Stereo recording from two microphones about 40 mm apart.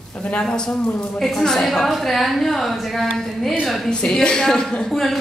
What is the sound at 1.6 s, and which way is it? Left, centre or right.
A woman's voice, centre.